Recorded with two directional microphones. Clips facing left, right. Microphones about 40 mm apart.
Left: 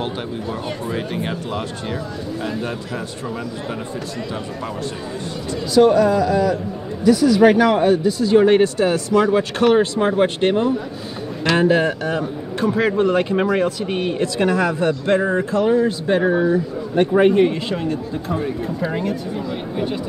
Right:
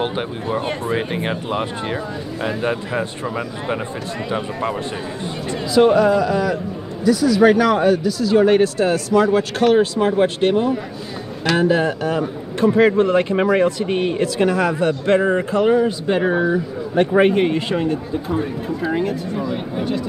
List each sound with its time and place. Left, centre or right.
0.0 s speech: right
5.8 s speech: right
7.1 s speech: centre
12.6 s speech: centre
14.9 s speech: centre
18.3 s speech: centre